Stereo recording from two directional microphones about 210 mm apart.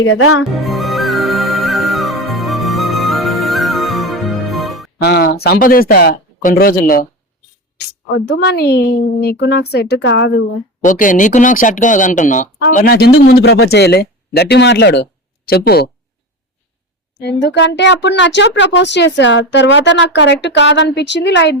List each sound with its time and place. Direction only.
0.0 s speech: 80° left
0.6 s music: centre (ahead or behind)
5.0 s a woman's voice: 50° left (ahead or behind)
8.1 s a woman's voice: 55° left (ahead or behind)
10.8 s speech: 40° left (ahead or behind)
12.7 s a woman's voice: 50° left (ahead or behind)
17.2 s speech: 55° left (ahead or behind)